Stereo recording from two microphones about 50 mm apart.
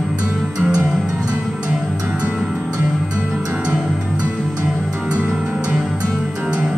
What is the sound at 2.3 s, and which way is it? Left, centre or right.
Music, centre.